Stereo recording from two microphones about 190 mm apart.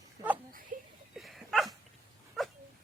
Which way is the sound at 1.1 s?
Centre (ahead or behind).